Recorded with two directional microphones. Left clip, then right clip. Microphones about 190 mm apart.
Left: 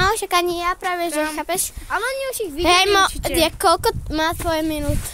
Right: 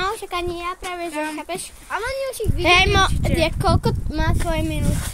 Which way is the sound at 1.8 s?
75° left (ahead or behind).